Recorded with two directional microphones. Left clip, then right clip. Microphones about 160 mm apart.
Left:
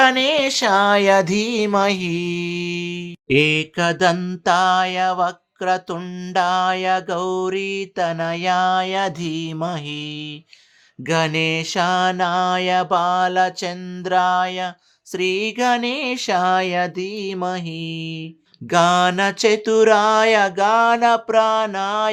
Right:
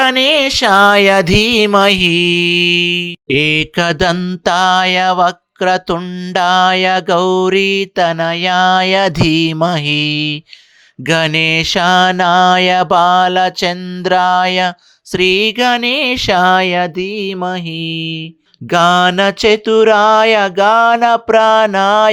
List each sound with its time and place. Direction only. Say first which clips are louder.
0.0 s mantra: right 5 dB; 35° right (ahead or behind)
0.9 s mantra: right 6 dB; 30° right (ahead or behind)
15.1 s mantra: right 9 dB; 30° right (ahead or behind); by 22.1 s 45° right (ahead or behind)